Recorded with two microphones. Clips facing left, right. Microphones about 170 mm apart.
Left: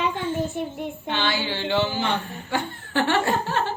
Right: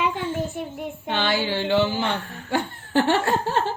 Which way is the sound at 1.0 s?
45° right (ahead or behind).